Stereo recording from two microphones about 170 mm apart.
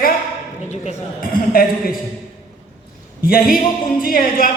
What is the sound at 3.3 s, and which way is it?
A man's voice, 60° left (ahead or behind).